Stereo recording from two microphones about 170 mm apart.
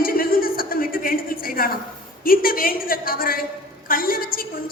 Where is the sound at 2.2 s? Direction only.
60° left (ahead or behind).